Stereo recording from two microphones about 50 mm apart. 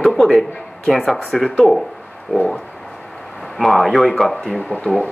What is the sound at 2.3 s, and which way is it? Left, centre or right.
Speech, left.